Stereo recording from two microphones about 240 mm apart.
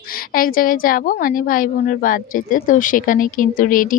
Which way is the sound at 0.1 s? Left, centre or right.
Left.